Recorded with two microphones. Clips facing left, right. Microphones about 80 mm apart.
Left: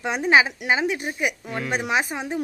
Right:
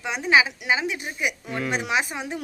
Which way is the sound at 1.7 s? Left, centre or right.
Left.